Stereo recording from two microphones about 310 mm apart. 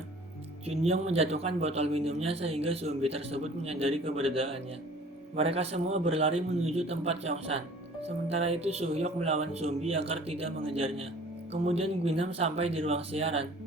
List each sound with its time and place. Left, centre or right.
0.6 s speech: centre